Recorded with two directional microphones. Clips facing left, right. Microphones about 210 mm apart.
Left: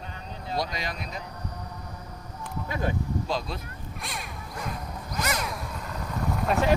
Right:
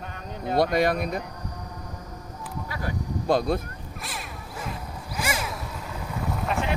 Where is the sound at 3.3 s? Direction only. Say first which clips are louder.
Right 13 dB; 55° right (ahead or behind).